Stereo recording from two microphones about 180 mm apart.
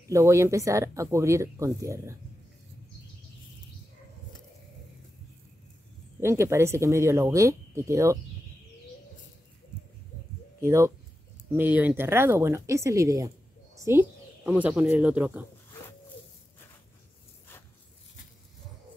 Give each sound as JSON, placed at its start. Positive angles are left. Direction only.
{"t": 0.1, "sound": "speech", "side_deg": -15}
{"t": 6.2, "sound": "speech", "side_deg": -15}
{"t": 10.6, "sound": "speech", "side_deg": -15}
{"t": 13.7, "sound": "a sound", "side_deg": -15}
{"t": 14.5, "sound": "speech", "side_deg": -5}